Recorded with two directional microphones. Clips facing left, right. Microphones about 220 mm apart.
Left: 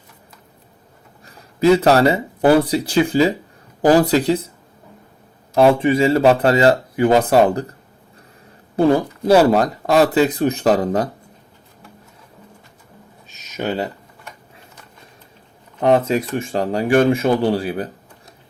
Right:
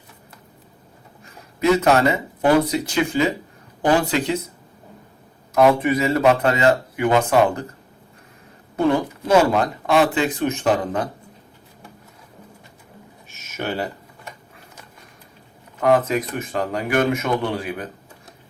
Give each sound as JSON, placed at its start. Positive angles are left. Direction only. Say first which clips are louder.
{"t": 1.2, "sound": "speech", "louder": "left 5 dB", "side_deg": 30}
{"t": 5.5, "sound": "speech", "louder": "left 3 dB", "side_deg": 30}
{"t": 8.7, "sound": "speech", "louder": "left 4 dB", "side_deg": 35}
{"t": 13.6, "sound": "speech", "louder": "left 3 dB", "side_deg": 20}
{"t": 15.8, "sound": "speech", "louder": "left 2 dB", "side_deg": 30}